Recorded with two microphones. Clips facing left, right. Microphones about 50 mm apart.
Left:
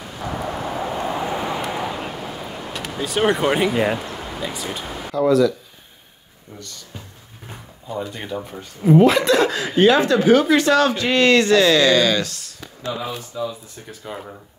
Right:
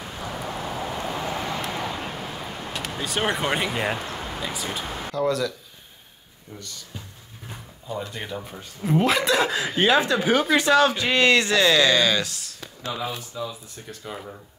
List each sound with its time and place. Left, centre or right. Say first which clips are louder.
0.2 s vehicle: left 6 dB; left; by 2.7 s centre
2.7 s speech: left 4 dB; centre
7.9 s speech: left 4 dB; centre